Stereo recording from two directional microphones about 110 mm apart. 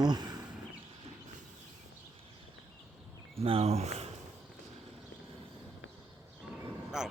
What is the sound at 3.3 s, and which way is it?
Speech, 60° right (ahead or behind).